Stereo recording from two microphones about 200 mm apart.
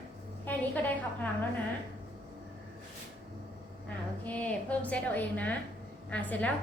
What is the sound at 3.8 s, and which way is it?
A woman's voice, 5° left (ahead or behind).